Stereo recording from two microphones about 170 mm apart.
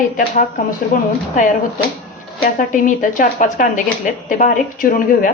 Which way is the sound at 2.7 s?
50° left (ahead or behind).